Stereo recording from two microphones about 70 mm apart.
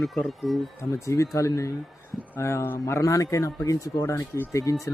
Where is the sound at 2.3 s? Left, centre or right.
Left.